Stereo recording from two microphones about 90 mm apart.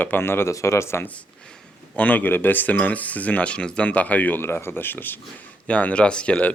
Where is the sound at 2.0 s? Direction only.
20° left (ahead or behind).